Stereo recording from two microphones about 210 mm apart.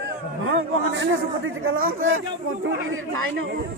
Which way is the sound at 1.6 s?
75° right (ahead or behind).